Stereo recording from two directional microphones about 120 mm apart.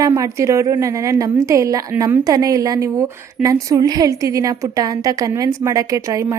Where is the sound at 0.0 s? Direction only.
30° right (ahead or behind).